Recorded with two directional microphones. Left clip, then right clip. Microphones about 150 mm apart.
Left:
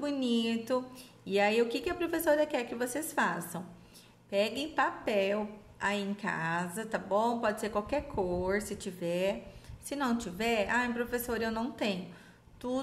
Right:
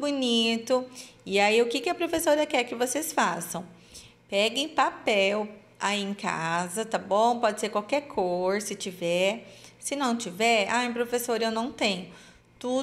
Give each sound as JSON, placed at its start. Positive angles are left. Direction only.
{"t": 0.0, "sound": "a woman's voice", "side_deg": -15}